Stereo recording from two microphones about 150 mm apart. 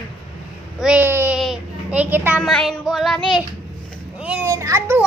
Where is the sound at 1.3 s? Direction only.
5° right (ahead or behind).